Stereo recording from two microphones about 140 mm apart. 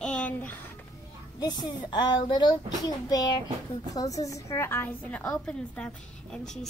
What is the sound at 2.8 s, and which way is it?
Child singing, 30° left (ahead or behind).